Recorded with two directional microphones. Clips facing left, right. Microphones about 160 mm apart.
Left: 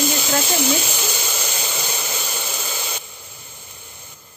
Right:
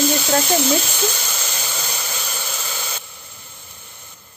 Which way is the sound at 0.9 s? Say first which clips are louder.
Right 2 dB; 10° left (ahead or behind).